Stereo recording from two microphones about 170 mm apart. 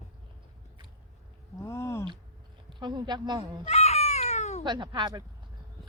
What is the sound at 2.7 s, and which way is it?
Speech, 25° right (ahead or behind).